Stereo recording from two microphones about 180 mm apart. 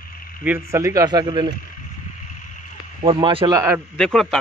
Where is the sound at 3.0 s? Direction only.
30° right (ahead or behind).